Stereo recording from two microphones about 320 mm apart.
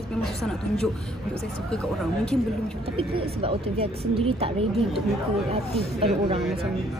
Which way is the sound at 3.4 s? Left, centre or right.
Centre.